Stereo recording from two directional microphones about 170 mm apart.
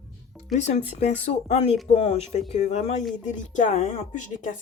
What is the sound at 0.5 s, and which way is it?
Speech, 45° left (ahead or behind).